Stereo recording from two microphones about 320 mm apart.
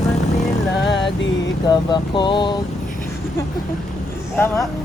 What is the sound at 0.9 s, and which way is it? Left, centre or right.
Music, left.